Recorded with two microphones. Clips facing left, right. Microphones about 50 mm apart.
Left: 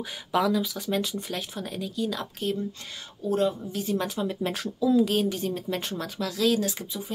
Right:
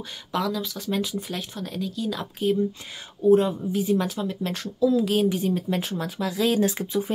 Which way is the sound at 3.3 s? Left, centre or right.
Centre.